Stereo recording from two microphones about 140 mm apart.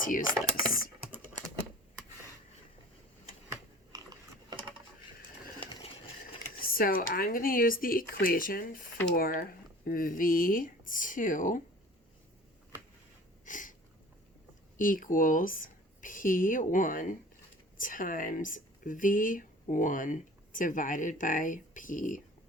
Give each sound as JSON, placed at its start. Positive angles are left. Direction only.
{"t": 0.0, "sound": "speech", "side_deg": 70}
{"t": 0.3, "sound": "speech", "side_deg": -25}
{"t": 3.9, "sound": "a sound", "side_deg": -25}
{"t": 6.6, "sound": "speech", "side_deg": 90}
{"t": 13.4, "sound": "a sound", "side_deg": 65}
{"t": 14.8, "sound": "speech", "side_deg": 80}